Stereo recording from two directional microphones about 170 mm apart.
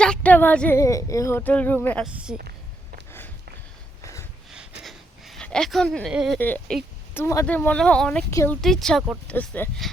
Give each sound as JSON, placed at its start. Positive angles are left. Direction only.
{"t": 0.0, "sound": "speech", "side_deg": 5}
{"t": 2.1, "sound": "a woman's voice", "side_deg": -5}
{"t": 4.0, "sound": "a sound", "side_deg": 15}
{"t": 4.8, "sound": "a sound", "side_deg": 0}
{"t": 6.4, "sound": "speech", "side_deg": 10}
{"t": 8.3, "sound": "speech", "side_deg": 15}
{"t": 8.6, "sound": "a woman's voice", "side_deg": 5}